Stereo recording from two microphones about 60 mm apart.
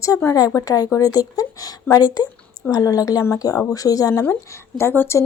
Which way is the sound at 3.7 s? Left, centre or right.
Left.